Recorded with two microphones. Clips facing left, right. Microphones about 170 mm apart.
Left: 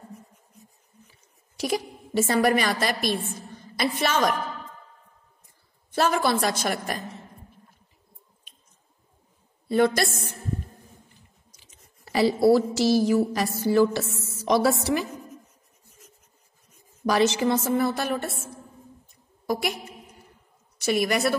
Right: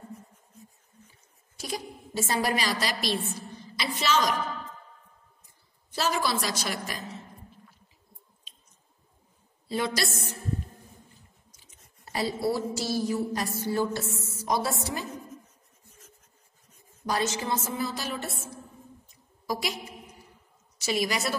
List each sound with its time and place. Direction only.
1.6 s a woman's voice: 70° left (ahead or behind); by 4.4 s 55° left (ahead or behind)
5.9 s a woman's voice: 55° left (ahead or behind)
9.7 s a sound: 55° left (ahead or behind)
11.6 s a woman's voice: 90° left
17.1 s a woman's voice: 80° left; by 21.4 s 55° left (ahead or behind)